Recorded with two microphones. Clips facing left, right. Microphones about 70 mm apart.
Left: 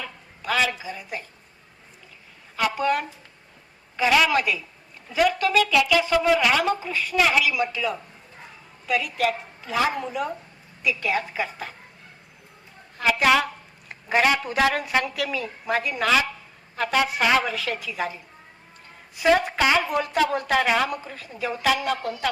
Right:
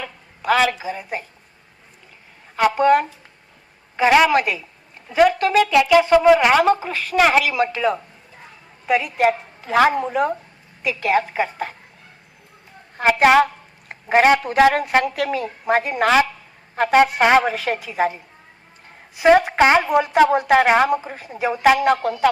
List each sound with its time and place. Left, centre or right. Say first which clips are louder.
0.0 s a woman's voice: right 6 dB; right
2.6 s speech: right 8 dB; right
6.8 s a woman's voice: right 5 dB; right
8.9 s a woman's voice: right 6 dB; right
13.0 s a woman's voice: right 6 dB; right
19.5 s a woman's voice: right 6 dB; right
21.6 s speech: right 9 dB; right